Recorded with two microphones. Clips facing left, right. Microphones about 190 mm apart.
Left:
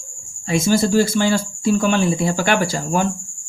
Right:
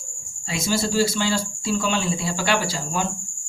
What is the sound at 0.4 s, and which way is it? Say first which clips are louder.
Speech: left 7 dB; 50° left (ahead or behind).